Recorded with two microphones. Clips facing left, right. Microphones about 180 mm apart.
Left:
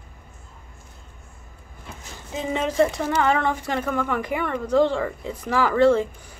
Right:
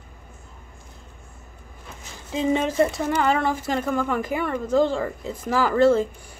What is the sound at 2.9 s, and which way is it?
Speech, 5° right (ahead or behind).